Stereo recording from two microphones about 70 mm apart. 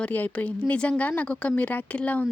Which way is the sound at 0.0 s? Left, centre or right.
Left.